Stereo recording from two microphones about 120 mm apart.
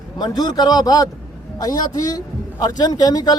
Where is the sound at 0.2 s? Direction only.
35° left (ahead or behind).